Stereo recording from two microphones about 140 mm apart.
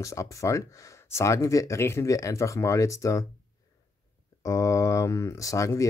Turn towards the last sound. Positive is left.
turn(degrees=20)  # may be behind; listen again after turning